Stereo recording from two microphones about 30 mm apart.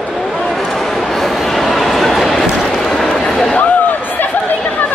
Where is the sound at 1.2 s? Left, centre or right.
Centre.